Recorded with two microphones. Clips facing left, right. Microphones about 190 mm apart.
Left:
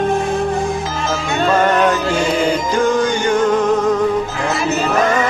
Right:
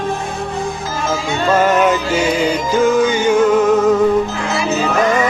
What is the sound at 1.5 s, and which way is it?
Music, 5° right (ahead or behind).